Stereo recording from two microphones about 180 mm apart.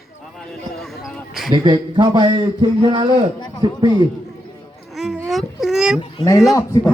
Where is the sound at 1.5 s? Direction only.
25° right (ahead or behind).